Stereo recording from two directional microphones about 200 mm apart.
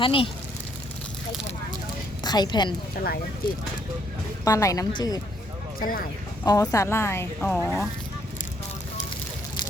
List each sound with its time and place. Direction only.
0.0 s speech: 25° left (ahead or behind)
2.2 s speech: 20° left (ahead or behind)
4.4 s speech: 15° left (ahead or behind)
5.8 s speech: 45° left (ahead or behind)
6.4 s speech: 15° left (ahead or behind)